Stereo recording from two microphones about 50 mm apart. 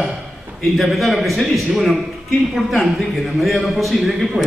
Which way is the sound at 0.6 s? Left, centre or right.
Centre.